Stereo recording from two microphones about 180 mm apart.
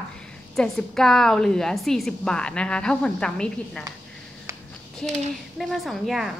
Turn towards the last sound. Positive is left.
turn(degrees=0)  # may be behind; listen again after turning